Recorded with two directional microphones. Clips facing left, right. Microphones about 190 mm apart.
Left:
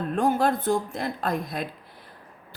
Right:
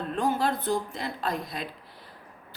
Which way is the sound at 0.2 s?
50° left (ahead or behind).